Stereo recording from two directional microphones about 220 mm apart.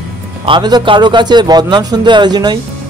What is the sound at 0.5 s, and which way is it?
Speech, 20° right (ahead or behind).